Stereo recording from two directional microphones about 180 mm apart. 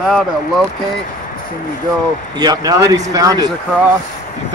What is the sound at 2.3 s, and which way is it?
Speech, 20° right (ahead or behind).